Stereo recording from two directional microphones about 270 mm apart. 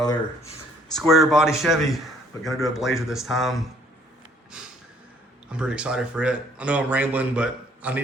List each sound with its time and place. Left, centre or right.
0.0 s speech: centre
0.9 s speech: centre
5.5 s speech: centre